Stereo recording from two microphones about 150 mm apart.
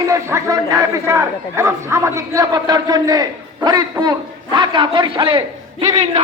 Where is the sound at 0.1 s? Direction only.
20° right (ahead or behind); by 5.4 s 35° right (ahead or behind).